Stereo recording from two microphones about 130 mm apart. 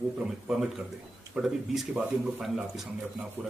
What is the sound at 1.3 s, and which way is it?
Speech, 5° right (ahead or behind).